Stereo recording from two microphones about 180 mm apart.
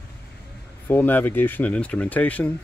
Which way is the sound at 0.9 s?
10° left (ahead or behind).